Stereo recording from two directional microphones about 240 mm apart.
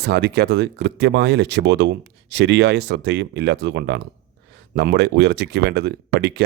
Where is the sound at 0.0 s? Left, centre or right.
Right.